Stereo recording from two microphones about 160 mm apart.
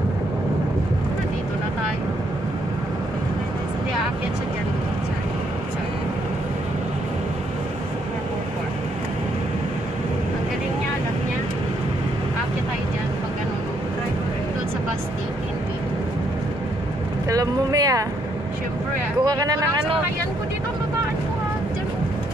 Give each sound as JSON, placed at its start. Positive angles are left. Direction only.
{"t": 17.3, "sound": "vehicle", "side_deg": -20}
{"t": 19.2, "sound": "vehicle", "side_deg": -20}